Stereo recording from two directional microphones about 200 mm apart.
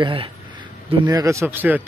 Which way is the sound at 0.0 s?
25° right (ahead or behind).